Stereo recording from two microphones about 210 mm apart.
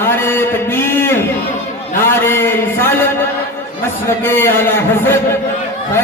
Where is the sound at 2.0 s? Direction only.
10° left (ahead or behind).